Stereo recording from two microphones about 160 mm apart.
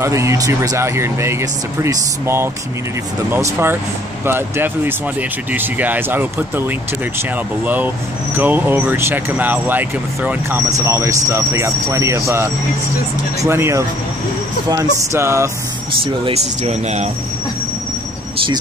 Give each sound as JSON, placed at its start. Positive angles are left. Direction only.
{"t": 0.0, "sound": "speech", "side_deg": -15}
{"t": 14.7, "sound": "music", "side_deg": -20}
{"t": 16.0, "sound": "speech", "side_deg": -40}